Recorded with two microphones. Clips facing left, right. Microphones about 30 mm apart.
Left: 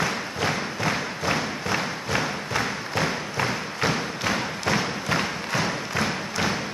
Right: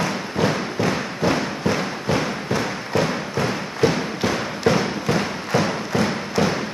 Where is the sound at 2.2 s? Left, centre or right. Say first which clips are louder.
Right 3 dB; centre.